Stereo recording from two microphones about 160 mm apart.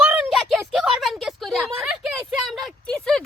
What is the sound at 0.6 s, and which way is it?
Speech, 5° right (ahead or behind).